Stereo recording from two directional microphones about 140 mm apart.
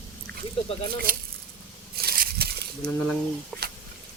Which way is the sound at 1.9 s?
90° right.